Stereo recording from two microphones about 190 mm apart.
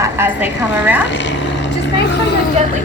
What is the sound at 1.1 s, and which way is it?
Speech, 70° left (ahead or behind).